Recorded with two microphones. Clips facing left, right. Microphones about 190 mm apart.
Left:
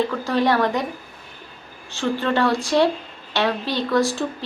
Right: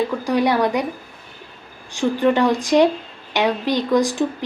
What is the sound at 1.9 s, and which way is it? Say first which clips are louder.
A woman's voice: right 5 dB; 15° right (ahead or behind).